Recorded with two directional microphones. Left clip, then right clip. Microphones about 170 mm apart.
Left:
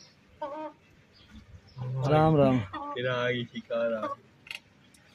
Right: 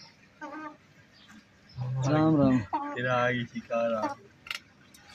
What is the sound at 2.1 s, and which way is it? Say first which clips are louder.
Speech: left 2 dB; 45° left (ahead or behind).